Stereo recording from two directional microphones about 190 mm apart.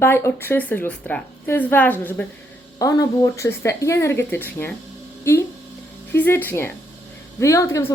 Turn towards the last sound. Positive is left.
turn(degrees=15)  # may be behind; listen again after turning